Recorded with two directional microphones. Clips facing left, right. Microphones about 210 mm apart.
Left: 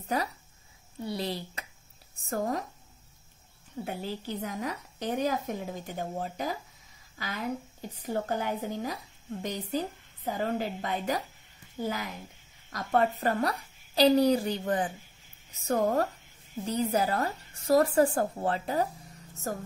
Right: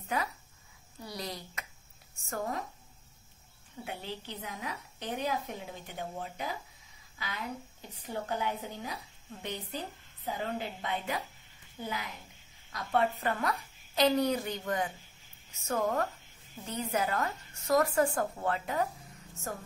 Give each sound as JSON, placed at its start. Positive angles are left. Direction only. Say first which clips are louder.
{"t": 0.1, "sound": "speech", "louder": "left 3 dB", "side_deg": 40}
{"t": 1.0, "sound": "a sound", "louder": "left 7 dB", "side_deg": 30}
{"t": 2.2, "sound": "a woman's voice", "louder": "left 5 dB", "side_deg": 40}
{"t": 3.8, "sound": "a woman's voice", "louder": "left 5 dB", "side_deg": 45}
{"t": 12.7, "sound": "speech", "louder": "left 3 dB", "side_deg": 45}